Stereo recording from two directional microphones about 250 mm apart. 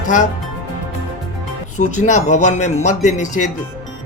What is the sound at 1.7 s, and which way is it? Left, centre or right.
Speech, left.